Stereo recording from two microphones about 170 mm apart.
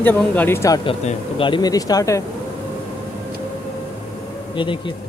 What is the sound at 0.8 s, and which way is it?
Speech, 30° left (ahead or behind).